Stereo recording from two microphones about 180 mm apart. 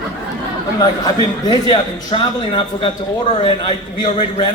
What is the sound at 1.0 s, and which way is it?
A man's voice, 25° left (ahead or behind).